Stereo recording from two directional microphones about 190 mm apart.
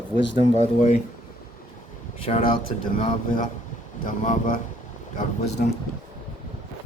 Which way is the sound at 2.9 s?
45° left (ahead or behind).